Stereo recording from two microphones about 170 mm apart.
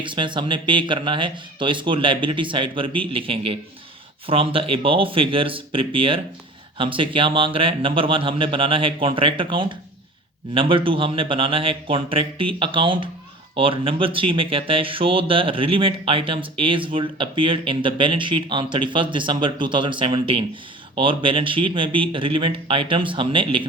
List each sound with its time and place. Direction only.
0.0 s speech: 30° right (ahead or behind)